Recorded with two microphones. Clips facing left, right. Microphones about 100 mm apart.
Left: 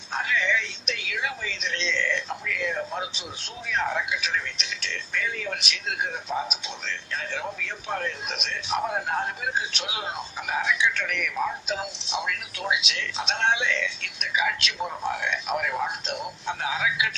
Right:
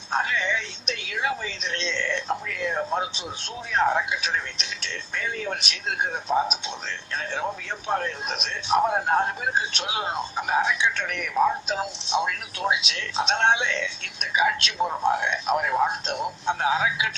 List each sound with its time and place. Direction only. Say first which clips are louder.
0.1 s music: right 4 dB; 35° right (ahead or behind)
0.3 s a sound: left 1 dB; 30° right (ahead or behind)
1.1 s speech: right 5 dB; 35° right (ahead or behind)
2.0 s a sound: right 2 dB; 30° right (ahead or behind)
3.8 s speech: right 4 dB; 30° right (ahead or behind)
7.9 s speech: right 4 dB; 35° right (ahead or behind)
13.3 s speech: right 2 dB; 30° right (ahead or behind)